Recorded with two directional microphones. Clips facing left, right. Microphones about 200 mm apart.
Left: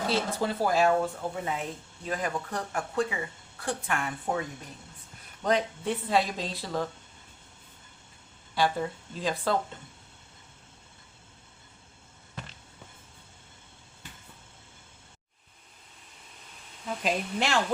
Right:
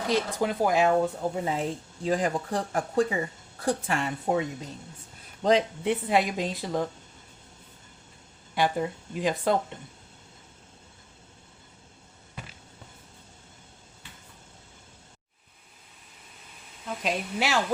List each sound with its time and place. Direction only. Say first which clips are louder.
0.1 s speech: right 5 dB; 15° right (ahead or behind)
1.5 s speech: right 4 dB; 30° right (ahead or behind)
8.5 s speech: right 1 dB; 15° right (ahead or behind)
16.8 s speech: even; centre (ahead or behind)